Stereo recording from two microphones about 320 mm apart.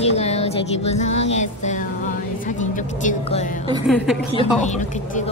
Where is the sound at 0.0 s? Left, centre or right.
Centre.